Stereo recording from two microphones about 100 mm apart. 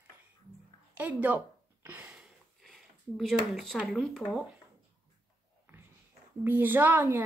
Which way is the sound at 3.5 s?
5° left (ahead or behind).